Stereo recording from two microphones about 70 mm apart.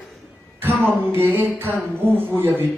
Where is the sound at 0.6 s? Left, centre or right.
Right.